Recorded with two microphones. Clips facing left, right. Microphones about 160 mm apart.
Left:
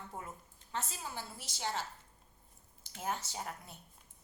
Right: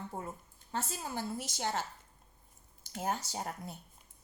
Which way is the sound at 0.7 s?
40° right (ahead or behind).